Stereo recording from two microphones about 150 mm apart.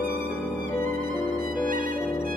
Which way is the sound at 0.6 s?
65° right (ahead or behind).